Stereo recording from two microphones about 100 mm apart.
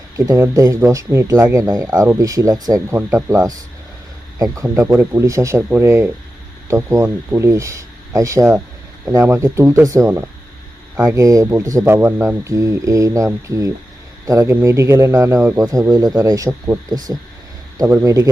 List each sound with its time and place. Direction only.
0.3 s speech: 35° right (ahead or behind)
2.9 s speech: 25° right (ahead or behind)